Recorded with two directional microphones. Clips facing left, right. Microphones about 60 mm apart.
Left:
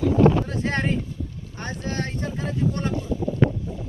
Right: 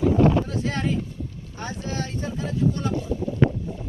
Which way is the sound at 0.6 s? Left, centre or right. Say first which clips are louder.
Left 2 dB; left.